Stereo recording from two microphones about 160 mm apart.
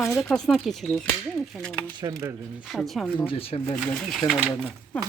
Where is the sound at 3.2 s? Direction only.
35° left (ahead or behind).